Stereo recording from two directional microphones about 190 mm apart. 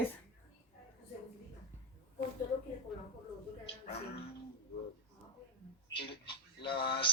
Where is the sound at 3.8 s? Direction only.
35° left (ahead or behind).